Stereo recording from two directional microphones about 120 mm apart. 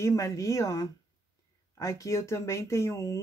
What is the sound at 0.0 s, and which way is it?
Speech, 25° left (ahead or behind).